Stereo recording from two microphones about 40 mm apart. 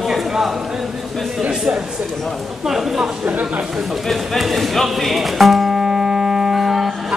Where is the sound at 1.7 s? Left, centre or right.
Right.